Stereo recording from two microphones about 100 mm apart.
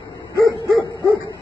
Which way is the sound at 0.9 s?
30° left (ahead or behind).